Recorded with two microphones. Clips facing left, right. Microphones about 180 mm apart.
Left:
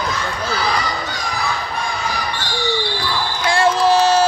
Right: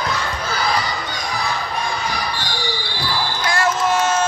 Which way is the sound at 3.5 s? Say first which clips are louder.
Left 5 dB; 30° left (ahead or behind).